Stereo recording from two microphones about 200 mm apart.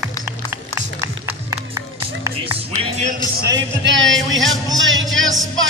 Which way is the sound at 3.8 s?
70° right (ahead or behind).